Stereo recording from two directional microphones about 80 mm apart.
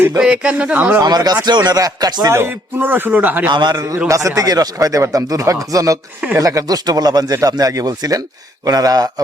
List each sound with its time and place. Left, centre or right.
0.2 s speech: centre
1.0 s speech: right
2.3 s a man's voice: right
3.5 s a man's voice: right
4.1 s speech: right